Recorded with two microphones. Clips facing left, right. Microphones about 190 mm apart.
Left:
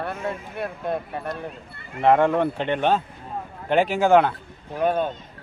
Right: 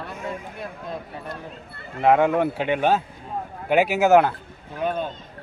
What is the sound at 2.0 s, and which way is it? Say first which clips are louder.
Speech: even; 5° right (ahead or behind).